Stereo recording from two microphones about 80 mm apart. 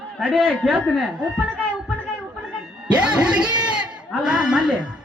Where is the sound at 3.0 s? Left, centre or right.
Centre.